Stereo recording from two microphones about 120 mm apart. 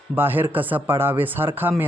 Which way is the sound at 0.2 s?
15° right (ahead or behind).